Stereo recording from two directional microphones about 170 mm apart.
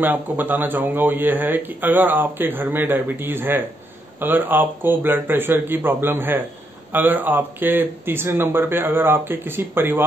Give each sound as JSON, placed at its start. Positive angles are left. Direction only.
{"t": 0.0, "sound": "speech", "side_deg": -10}